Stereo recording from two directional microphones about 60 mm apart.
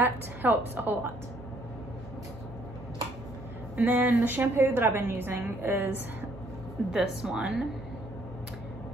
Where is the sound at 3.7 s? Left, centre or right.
Right.